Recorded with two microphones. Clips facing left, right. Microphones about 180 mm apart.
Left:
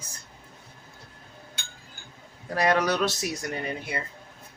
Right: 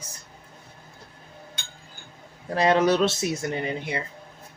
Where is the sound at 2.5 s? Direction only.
25° right (ahead or behind).